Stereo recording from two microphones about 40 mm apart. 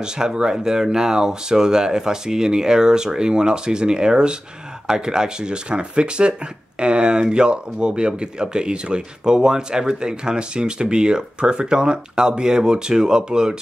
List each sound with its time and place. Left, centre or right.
0.0 s speech: centre